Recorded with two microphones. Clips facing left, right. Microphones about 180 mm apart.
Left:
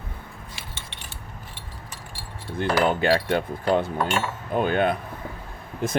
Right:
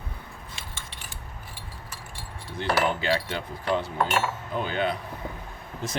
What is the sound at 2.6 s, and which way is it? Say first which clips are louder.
Speech: left 4 dB; 55° left (ahead or behind).